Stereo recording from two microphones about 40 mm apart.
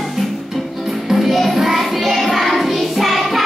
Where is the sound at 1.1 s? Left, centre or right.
Centre.